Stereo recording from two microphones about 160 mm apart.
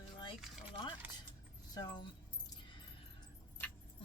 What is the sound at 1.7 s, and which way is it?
Speech, 25° left (ahead or behind).